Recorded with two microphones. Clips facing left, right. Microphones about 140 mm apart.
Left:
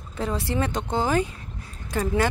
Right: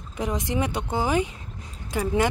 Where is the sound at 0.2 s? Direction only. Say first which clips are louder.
Even; 15° right (ahead or behind).